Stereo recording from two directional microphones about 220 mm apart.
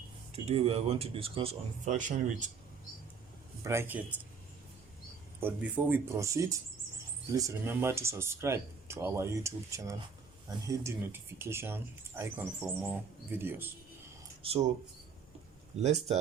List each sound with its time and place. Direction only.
0.4 s speech: 25° right (ahead or behind)
3.6 s speech: 10° right (ahead or behind)
5.4 s speech: 10° right (ahead or behind)
14.4 s speech: 25° right (ahead or behind)
15.8 s speech: 30° right (ahead or behind)